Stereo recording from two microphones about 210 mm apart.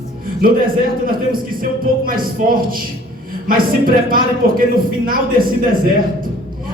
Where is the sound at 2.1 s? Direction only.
45° right (ahead or behind).